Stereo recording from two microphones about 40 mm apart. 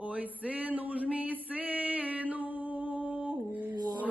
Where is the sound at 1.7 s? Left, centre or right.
Right.